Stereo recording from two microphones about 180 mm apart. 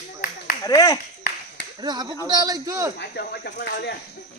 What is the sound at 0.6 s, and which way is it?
Speech, 20° left (ahead or behind).